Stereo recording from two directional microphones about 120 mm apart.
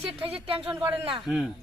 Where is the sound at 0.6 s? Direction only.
15° right (ahead or behind).